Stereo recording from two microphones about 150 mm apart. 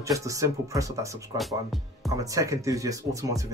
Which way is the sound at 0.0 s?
20° right (ahead or behind).